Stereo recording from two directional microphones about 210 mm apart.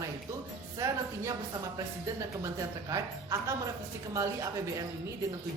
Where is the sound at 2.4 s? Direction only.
15° right (ahead or behind).